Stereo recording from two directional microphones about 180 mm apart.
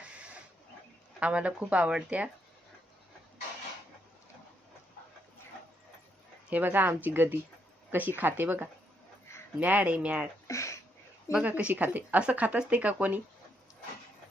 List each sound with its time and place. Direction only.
1.2 s speech: 5° right (ahead or behind)
6.5 s speech: 10° right (ahead or behind)
10.4 s a sound: 15° left (ahead or behind)
11.3 s speech: 5° right (ahead or behind)